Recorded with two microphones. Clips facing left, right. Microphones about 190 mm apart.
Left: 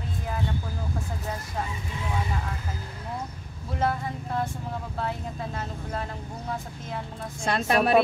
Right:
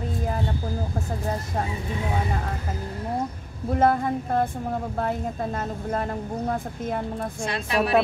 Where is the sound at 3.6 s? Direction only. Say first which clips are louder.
Right 7 dB; 50° right (ahead or behind).